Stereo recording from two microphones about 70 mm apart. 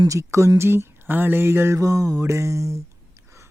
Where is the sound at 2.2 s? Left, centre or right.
Right.